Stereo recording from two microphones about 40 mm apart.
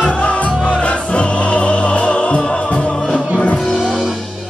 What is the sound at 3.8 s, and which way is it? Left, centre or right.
Music, centre.